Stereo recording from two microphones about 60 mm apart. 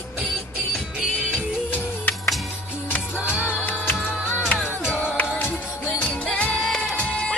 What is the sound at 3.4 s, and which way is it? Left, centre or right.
Music, left.